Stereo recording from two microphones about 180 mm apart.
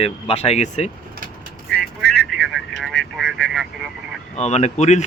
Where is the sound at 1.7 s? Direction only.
5° left (ahead or behind).